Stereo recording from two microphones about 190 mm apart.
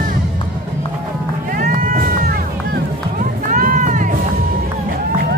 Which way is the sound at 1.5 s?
45° right (ahead or behind).